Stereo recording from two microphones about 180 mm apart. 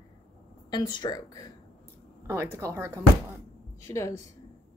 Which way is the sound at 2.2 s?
15° right (ahead or behind).